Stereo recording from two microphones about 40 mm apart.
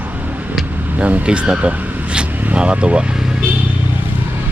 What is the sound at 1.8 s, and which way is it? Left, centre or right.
Car, right.